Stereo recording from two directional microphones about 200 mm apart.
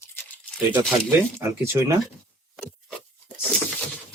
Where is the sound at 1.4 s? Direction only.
10° right (ahead or behind).